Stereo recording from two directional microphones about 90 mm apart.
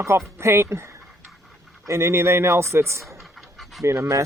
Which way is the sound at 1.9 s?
30° right (ahead or behind).